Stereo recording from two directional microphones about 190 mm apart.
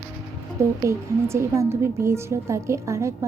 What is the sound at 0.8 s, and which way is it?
A woman's voice, 15° right (ahead or behind).